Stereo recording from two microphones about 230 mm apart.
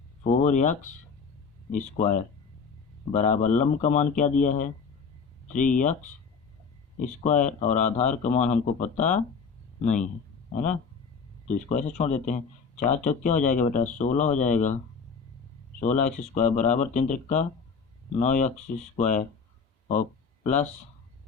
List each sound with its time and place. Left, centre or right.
0.4 s speech: left
10.5 s speech: left
15.8 s speech: left
19.9 s a sound: left